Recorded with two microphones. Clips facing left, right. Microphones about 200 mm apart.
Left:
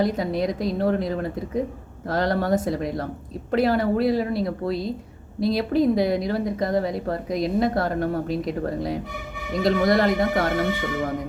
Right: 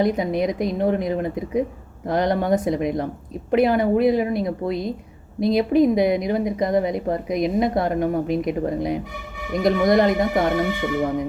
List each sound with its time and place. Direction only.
0.0 s a woman's voice: 20° right (ahead or behind)